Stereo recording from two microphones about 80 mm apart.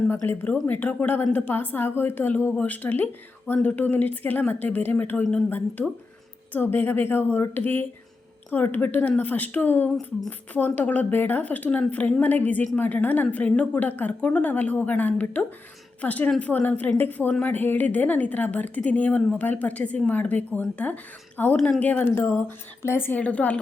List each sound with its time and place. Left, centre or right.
0.7 s a woman's voice: centre